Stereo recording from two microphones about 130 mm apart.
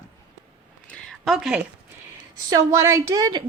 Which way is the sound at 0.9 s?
Centre (ahead or behind).